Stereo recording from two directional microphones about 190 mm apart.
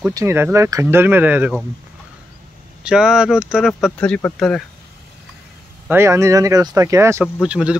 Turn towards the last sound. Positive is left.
turn(degrees=-5)  # may be behind; listen again after turning